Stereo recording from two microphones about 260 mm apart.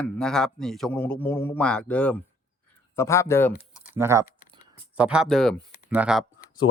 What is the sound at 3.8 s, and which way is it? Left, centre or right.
Typing, centre.